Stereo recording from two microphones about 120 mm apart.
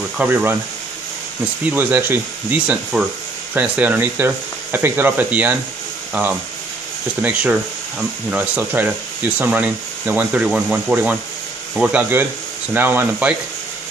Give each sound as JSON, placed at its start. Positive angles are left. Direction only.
{"t": 0.2, "sound": "speech", "side_deg": -15}
{"t": 1.7, "sound": "speech", "side_deg": -15}
{"t": 7.2, "sound": "speech", "side_deg": -15}